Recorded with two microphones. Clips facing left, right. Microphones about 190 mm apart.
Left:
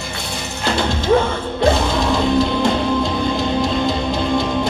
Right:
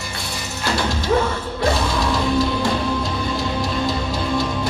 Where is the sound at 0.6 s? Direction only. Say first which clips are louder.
Left 3 dB; 25° left (ahead or behind).